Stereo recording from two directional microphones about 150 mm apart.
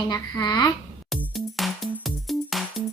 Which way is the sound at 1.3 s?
Centre (ahead or behind).